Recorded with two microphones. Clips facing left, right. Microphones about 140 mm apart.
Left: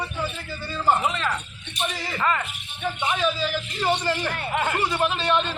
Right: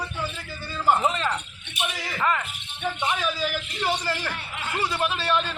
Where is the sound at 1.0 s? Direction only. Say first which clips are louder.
Right 1 dB; 20° right (ahead or behind).